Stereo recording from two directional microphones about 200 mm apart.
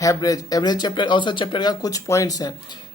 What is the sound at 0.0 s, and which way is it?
Speech, 15° left (ahead or behind).